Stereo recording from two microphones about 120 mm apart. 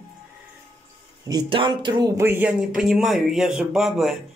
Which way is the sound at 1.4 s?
45° right (ahead or behind).